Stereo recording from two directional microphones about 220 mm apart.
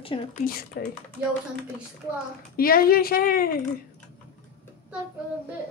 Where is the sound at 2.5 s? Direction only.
40° left (ahead or behind).